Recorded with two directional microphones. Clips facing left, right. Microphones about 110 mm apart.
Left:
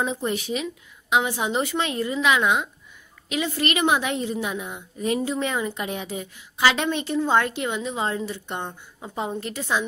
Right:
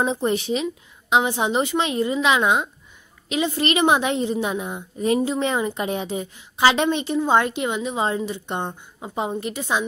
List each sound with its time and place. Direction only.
0.0 s a woman's voice: 30° right (ahead or behind)